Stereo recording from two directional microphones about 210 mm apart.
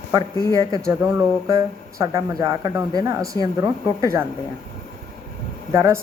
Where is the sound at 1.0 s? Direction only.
15° right (ahead or behind).